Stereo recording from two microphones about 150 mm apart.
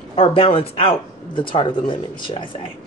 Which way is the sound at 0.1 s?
40° left (ahead or behind).